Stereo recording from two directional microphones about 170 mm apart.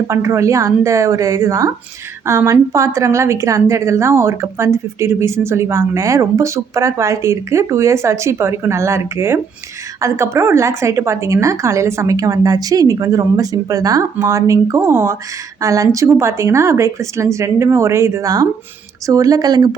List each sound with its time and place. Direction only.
0.1 s a woman's voice: 15° right (ahead or behind)